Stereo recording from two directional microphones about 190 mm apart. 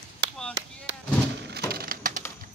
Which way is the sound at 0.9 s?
65° right (ahead or behind).